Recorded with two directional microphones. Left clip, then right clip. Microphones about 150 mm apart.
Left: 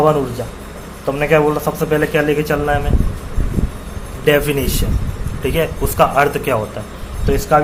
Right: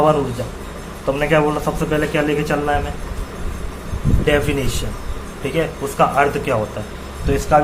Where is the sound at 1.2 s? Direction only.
50° left (ahead or behind).